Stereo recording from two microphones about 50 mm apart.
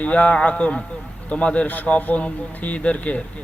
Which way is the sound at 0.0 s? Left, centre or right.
Left.